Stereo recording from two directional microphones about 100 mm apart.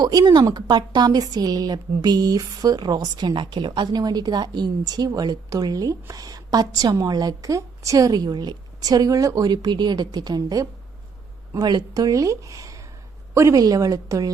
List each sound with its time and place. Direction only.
0.0 s a woman's voice: 40° right (ahead or behind)